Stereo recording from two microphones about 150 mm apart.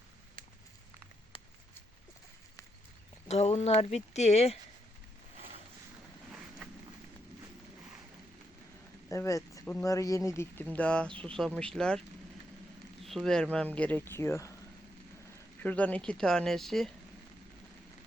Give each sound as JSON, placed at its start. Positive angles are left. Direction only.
{"t": 1.3, "sound": "a sound", "side_deg": 35}
{"t": 3.2, "sound": "speech", "side_deg": 45}
{"t": 9.0, "sound": "speech", "side_deg": 20}
{"t": 13.1, "sound": "speech", "side_deg": 0}
{"t": 15.6, "sound": "speech", "side_deg": 10}